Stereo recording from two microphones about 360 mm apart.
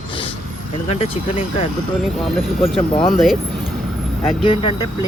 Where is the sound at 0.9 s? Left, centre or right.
Centre.